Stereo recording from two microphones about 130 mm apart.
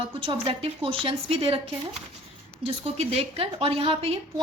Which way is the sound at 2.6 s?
50° right (ahead or behind).